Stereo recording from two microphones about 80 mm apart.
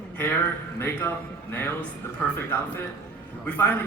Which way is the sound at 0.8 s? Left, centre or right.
Left.